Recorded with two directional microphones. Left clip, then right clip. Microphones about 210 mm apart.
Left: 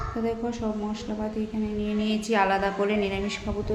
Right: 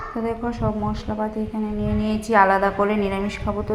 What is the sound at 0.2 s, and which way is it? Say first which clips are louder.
A woman's voice: right 4 dB; 10° right (ahead or behind).